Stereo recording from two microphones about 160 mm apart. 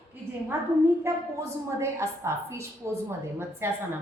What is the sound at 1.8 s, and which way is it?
A woman's voice, 15° right (ahead or behind).